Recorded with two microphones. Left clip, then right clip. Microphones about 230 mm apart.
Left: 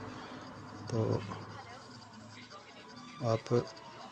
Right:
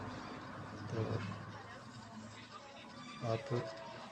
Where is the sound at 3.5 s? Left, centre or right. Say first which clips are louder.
Left 9 dB; left.